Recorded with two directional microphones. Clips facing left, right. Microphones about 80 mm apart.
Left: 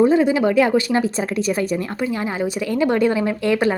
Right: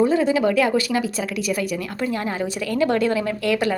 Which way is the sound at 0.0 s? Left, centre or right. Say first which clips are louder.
Left 3 dB; left.